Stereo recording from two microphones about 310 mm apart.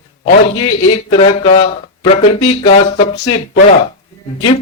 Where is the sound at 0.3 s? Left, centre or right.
Centre.